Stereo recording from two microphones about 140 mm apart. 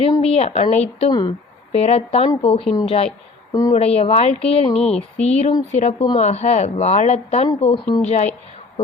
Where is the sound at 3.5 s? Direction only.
25° left (ahead or behind).